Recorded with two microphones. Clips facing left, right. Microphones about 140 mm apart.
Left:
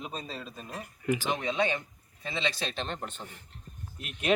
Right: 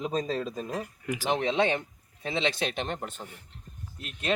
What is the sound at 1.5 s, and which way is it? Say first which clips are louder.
Speech: right 2 dB; 25° right (ahead or behind).